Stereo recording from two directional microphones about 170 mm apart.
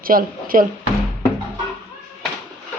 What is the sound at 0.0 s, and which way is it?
Speech, 55° right (ahead or behind).